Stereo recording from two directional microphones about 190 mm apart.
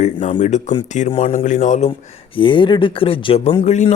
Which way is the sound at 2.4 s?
25° left (ahead or behind).